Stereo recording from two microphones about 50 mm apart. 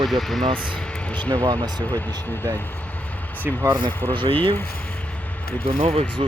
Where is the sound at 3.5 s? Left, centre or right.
Right.